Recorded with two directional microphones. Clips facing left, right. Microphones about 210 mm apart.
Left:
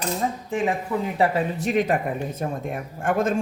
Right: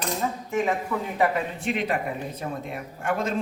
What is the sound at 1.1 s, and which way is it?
Speech, 35° left (ahead or behind).